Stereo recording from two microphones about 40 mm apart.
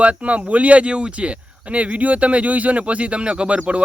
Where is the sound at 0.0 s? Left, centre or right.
Right.